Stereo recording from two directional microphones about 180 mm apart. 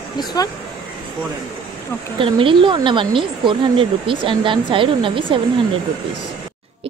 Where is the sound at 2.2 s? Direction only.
30° right (ahead or behind).